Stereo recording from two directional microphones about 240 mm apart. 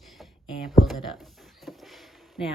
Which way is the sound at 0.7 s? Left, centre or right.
Centre.